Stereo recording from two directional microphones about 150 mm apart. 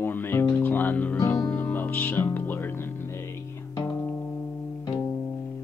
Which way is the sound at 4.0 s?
10° left (ahead or behind).